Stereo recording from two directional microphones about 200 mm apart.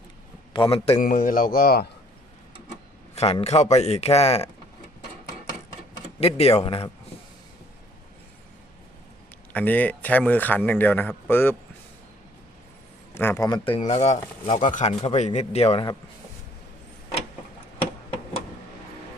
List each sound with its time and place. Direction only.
0.5 s a man's voice: 25° left (ahead or behind)
0.9 s speech: 40° left (ahead or behind)
3.2 s speech: 30° left (ahead or behind)
6.1 s speech: 30° left (ahead or behind)
9.5 s speech: 10° left (ahead or behind)
13.1 s speech: 15° left (ahead or behind); by 15.9 s 30° left (ahead or behind)